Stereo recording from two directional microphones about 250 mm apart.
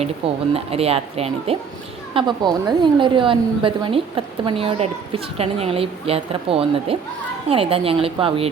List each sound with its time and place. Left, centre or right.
0.5 s a woman's voice: right